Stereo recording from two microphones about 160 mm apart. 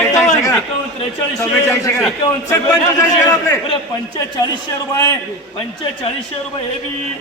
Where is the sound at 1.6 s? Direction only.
20° left (ahead or behind).